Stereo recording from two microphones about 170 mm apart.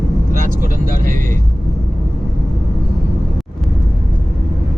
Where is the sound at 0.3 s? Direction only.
55° right (ahead or behind).